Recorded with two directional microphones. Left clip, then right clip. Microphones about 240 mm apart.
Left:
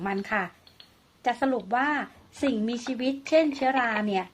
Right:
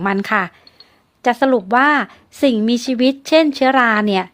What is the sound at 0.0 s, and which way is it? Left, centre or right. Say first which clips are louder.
A woman's voice: right 11 dB; right.